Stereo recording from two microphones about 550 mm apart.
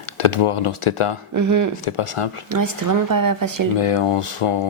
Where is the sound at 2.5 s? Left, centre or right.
Right.